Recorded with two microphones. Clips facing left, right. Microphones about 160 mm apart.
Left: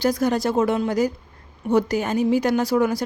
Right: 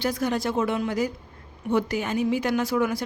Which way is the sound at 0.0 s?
40° left (ahead or behind).